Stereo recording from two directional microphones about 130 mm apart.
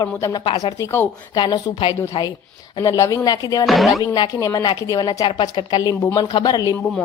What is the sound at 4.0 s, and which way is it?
A woman's voice, 30° left (ahead or behind).